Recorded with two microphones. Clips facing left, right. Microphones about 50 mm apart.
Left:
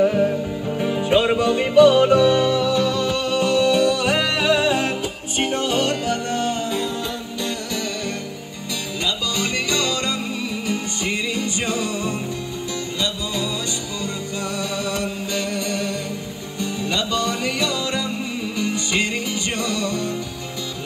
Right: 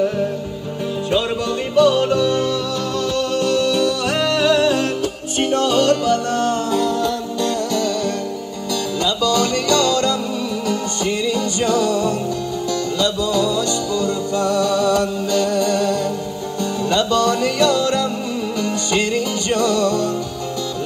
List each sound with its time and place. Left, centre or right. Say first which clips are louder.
1.1 s music: left 3 dB; left
14.0 s music: right 7 dB; right
15.3 s music: right 8 dB; left